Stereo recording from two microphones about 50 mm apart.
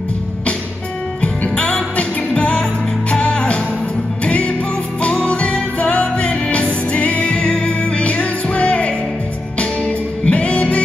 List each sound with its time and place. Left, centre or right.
1.5 s music: left
10.2 s music: left